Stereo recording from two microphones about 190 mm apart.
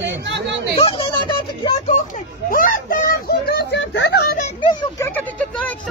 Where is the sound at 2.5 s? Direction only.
45° left (ahead or behind); by 4.2 s 65° left (ahead or behind).